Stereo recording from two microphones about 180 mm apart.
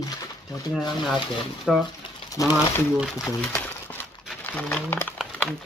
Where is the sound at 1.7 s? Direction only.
Centre (ahead or behind).